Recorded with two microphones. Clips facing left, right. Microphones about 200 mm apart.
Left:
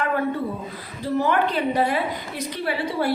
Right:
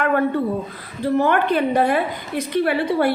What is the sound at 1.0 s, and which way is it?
A woman's voice, 55° right (ahead or behind).